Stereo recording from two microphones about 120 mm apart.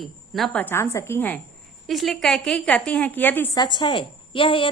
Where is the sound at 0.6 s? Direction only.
20° left (ahead or behind).